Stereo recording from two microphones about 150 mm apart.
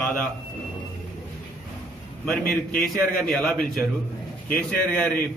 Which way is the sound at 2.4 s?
80° left.